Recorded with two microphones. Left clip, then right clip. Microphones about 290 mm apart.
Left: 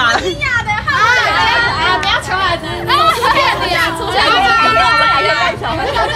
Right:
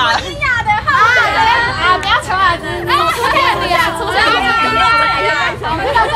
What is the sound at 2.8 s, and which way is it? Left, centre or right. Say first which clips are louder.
Speech: left 2 dB; centre.